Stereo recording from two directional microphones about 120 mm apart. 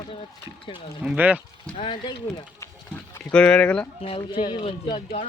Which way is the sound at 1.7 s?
40° left (ahead or behind).